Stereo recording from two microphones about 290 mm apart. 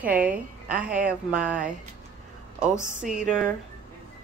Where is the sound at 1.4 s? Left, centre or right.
Centre.